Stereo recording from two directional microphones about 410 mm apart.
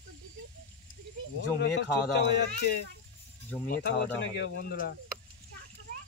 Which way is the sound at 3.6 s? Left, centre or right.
Left.